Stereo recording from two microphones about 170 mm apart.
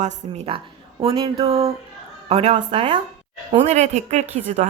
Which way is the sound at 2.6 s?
30° right (ahead or behind).